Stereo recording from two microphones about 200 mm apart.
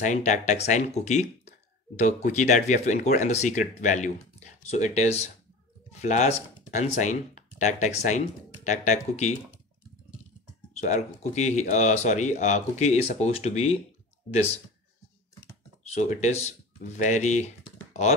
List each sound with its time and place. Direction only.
0.0 s speech: 35° left (ahead or behind)
10.7 s speech: 35° left (ahead or behind)
15.8 s speech: 35° left (ahead or behind)